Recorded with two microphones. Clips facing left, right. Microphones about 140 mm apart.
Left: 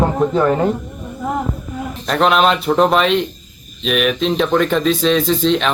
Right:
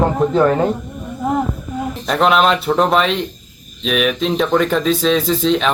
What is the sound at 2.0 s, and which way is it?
A man's voice, centre (ahead or behind).